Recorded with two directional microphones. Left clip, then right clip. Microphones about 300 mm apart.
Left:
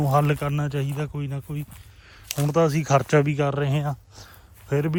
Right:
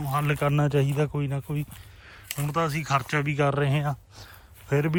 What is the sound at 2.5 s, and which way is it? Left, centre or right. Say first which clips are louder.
Speech: left 5 dB; centre.